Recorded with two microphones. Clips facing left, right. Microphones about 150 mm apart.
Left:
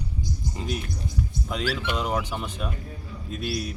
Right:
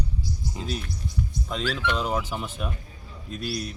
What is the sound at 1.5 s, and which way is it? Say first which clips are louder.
A man's voice: right 1 dB; 5° left (ahead or behind).